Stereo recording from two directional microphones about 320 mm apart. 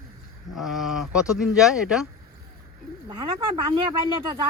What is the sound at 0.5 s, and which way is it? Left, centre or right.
Speech, centre.